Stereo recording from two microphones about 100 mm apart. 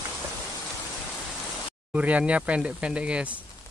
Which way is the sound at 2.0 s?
15° right (ahead or behind).